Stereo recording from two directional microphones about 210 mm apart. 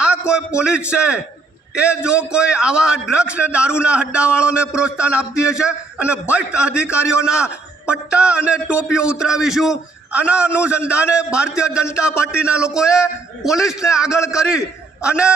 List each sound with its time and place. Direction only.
0.0 s a man's voice: 5° right (ahead or behind)